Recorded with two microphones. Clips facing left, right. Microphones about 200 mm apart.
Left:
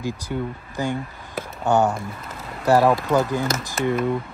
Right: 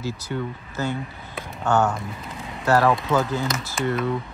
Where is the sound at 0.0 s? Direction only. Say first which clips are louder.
Left 1 dB; 10° left (ahead or behind).